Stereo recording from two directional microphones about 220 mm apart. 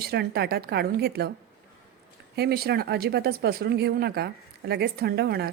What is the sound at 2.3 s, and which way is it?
Speech, 45° right (ahead or behind).